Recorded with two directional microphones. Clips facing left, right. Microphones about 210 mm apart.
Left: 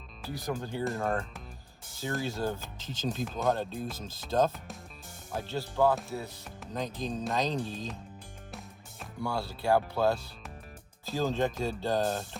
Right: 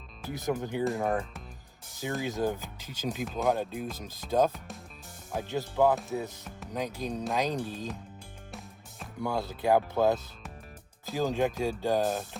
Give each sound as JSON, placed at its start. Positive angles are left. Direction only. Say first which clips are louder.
{"t": 0.3, "sound": "speech", "louder": "right 3 dB", "side_deg": -20}
{"t": 3.2, "sound": "speech", "louder": "right 2 dB", "side_deg": 0}
{"t": 3.5, "sound": "speech", "louder": "right 1 dB", "side_deg": -15}
{"t": 9.2, "sound": "speech", "louder": "right 2 dB", "side_deg": -20}